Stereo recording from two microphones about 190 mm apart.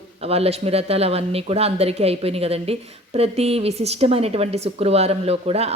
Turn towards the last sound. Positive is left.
turn(degrees=-35)  # may be behind; listen again after turning